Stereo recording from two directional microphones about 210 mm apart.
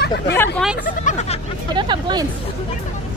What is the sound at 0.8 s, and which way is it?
Speech, 35° left (ahead or behind).